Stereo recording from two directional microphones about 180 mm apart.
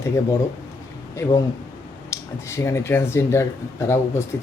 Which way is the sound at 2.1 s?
15° left (ahead or behind).